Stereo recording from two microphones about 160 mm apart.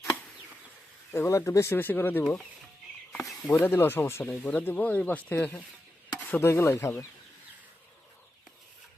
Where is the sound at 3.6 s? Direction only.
15° left (ahead or behind).